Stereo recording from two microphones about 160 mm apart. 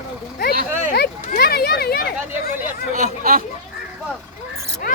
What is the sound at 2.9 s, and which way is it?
Speech, 60° right (ahead or behind).